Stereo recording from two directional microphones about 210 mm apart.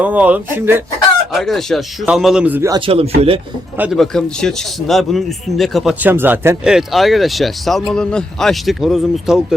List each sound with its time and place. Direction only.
0.0 s speech: 5° right (ahead or behind)
1.3 s a man's voice: centre (ahead or behind); by 3.4 s 25° right (ahead or behind)
3.8 s a man's voice: centre (ahead or behind)